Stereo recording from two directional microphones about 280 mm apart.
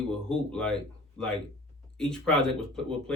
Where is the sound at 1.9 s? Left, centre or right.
Centre.